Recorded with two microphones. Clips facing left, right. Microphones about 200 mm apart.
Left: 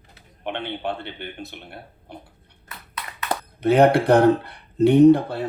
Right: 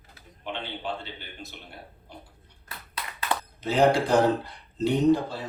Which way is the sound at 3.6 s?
60° left (ahead or behind).